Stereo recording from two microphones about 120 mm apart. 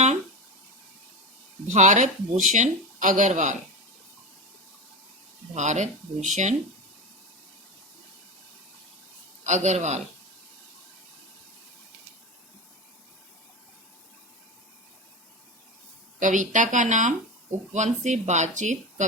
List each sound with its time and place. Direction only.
1.6 s speech: 90° right
5.5 s speech: 80° right
6.2 s speech: 90° right
9.4 s a man's voice: 75° right (ahead or behind)
16.2 s speech: 90° right